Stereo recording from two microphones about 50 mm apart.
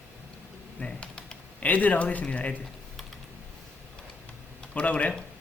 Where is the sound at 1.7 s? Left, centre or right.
Left.